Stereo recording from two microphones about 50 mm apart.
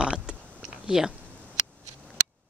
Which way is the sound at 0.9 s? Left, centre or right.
Centre.